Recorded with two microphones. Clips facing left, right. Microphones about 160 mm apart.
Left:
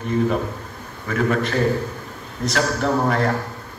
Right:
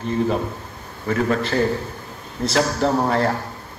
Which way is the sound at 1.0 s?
30° right (ahead or behind).